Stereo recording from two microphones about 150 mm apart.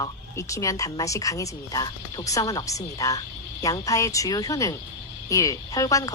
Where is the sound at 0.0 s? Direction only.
20° left (ahead or behind).